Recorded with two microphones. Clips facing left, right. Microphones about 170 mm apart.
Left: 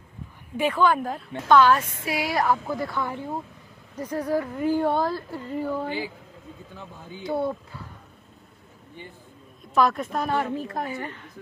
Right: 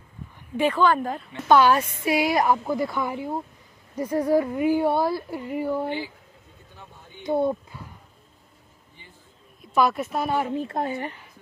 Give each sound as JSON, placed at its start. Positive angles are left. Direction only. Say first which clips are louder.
{"t": 0.6, "sound": "speech", "louder": "right 1 dB", "side_deg": 10}
{"t": 1.5, "sound": "speech", "louder": "even", "side_deg": -10}
{"t": 7.2, "sound": "speech", "louder": "right 4 dB", "side_deg": -20}
{"t": 9.8, "sound": "speech", "louder": "even", "side_deg": -5}
{"t": 10.5, "sound": "speech", "louder": "right 3 dB", "side_deg": -25}